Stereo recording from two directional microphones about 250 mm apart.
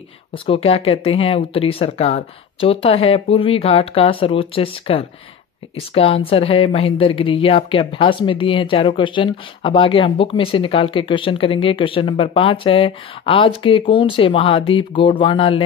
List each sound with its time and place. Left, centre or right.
0.3 s speech: left